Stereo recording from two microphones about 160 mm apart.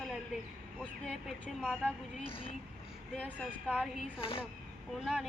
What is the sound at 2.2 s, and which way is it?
Speech, 35° left (ahead or behind).